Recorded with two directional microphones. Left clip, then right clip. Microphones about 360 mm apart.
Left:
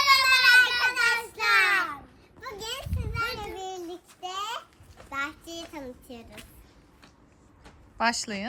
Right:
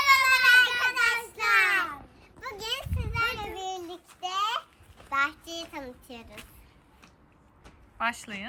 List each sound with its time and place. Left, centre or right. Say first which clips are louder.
0.0 s child singing: left 1 dB; centre
2.4 s a sound: right 2 dB; centre
5.0 s child singing: right 5 dB; centre
7.9 s speech: left 4 dB; centre